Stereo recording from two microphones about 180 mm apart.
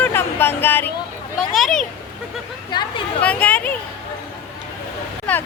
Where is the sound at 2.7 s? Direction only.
25° left (ahead or behind).